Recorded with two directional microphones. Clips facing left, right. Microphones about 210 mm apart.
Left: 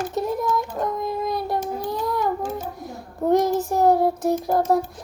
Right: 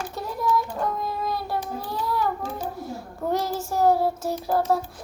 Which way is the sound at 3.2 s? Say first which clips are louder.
Left 8 dB; 15° left (ahead or behind).